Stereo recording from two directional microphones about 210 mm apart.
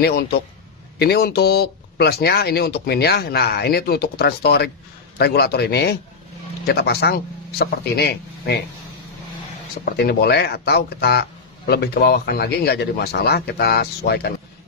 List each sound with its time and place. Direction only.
0.9 s speech: 50° left (ahead or behind)
9.8 s speech: 50° left (ahead or behind)